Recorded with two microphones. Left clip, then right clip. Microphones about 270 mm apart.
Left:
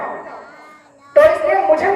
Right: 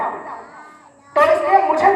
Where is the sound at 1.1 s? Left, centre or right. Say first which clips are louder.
Left 2 dB; centre.